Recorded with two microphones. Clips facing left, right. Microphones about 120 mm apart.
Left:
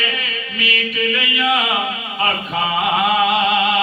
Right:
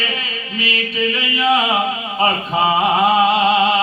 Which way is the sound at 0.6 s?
30° right (ahead or behind).